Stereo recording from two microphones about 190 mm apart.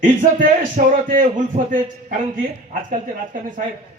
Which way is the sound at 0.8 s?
45° right (ahead or behind).